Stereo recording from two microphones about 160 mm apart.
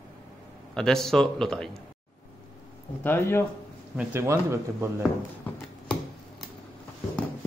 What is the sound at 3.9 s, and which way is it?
Speech, 15° right (ahead or behind).